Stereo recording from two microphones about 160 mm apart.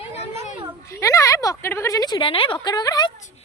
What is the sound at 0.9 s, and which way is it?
A woman's voice, 20° left (ahead or behind).